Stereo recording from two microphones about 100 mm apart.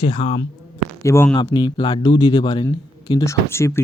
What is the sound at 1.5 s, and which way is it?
Speech, 50° left (ahead or behind).